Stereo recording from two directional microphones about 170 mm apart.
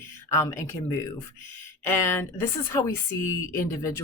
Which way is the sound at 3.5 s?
20° left (ahead or behind).